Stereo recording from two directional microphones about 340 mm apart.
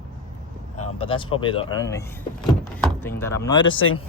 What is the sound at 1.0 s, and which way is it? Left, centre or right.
Speech, centre.